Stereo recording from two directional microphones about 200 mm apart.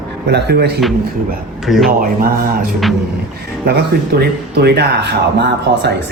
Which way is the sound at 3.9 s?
50° right (ahead or behind).